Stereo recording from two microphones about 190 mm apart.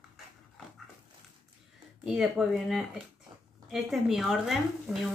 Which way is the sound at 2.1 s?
Centre (ahead or behind).